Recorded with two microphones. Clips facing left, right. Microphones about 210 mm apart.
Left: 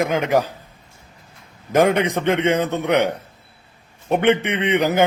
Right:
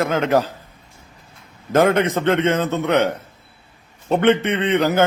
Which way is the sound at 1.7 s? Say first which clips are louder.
Right 1 dB; 15° left (ahead or behind).